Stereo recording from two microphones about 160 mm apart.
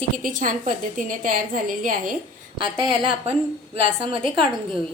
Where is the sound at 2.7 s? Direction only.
30° right (ahead or behind).